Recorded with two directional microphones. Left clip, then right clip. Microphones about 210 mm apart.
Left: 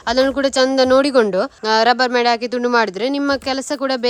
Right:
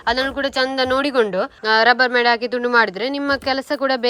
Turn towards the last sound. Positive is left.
turn(degrees=15)  # may be behind; listen again after turning